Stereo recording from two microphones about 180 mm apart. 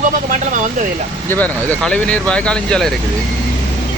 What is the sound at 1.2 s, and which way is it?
Speech, 10° left (ahead or behind).